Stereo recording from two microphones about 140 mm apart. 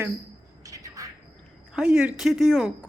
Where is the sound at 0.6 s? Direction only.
25° right (ahead or behind).